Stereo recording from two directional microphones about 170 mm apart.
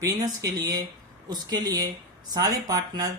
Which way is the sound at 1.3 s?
25° right (ahead or behind).